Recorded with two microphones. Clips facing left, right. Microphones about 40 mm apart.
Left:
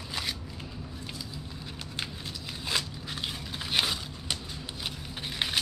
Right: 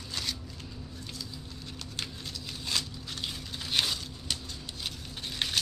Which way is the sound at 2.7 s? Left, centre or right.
Centre.